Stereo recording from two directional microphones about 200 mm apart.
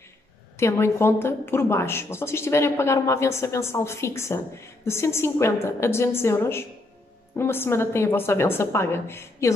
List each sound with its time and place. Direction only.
0.6 s a woman's voice: 15° left (ahead or behind)